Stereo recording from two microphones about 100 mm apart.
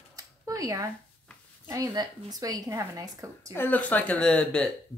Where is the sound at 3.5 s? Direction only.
20° left (ahead or behind).